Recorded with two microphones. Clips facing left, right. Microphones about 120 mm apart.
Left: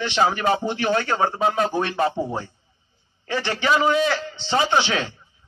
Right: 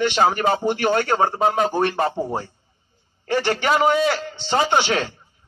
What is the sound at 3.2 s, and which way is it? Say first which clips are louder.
A man's voice: right 3 dB; 50° right (ahead or behind).